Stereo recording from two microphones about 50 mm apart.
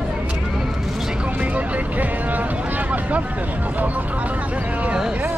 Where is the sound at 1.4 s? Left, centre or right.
Right.